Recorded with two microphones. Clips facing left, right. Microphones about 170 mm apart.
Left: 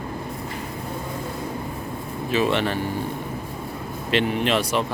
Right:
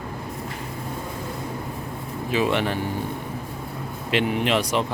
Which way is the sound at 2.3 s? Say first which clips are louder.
Left 1 dB; 15° right (ahead or behind).